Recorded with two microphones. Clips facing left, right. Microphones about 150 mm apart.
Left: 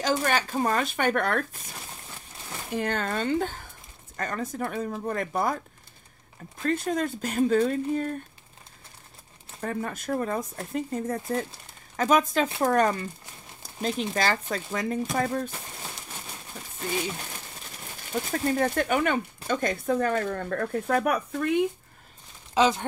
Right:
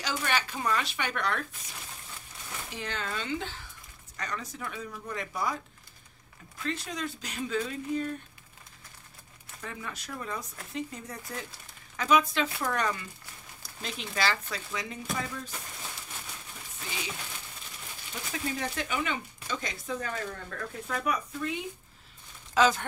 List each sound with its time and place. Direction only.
0.0 s speech: 45° left (ahead or behind)
2.7 s speech: 50° left (ahead or behind)
6.6 s speech: 50° left (ahead or behind)
9.6 s speech: 45° left (ahead or behind)
13.6 s a sound: 40° left (ahead or behind)
14.1 s speech: 45° left (ahead or behind)
18.1 s speech: 50° left (ahead or behind)
22.5 s speech: 25° left (ahead or behind)